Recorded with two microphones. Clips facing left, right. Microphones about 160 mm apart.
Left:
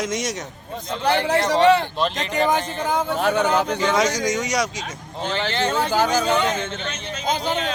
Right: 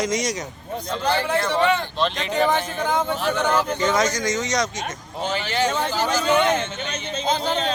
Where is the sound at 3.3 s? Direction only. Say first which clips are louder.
Left 2 dB; 65° left (ahead or behind).